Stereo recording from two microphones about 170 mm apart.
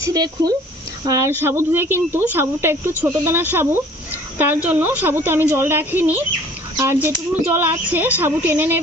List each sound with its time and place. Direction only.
0.0 s speech: 25° right (ahead or behind)